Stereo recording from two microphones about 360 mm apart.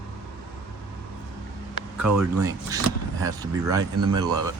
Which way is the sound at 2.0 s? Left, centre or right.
Centre.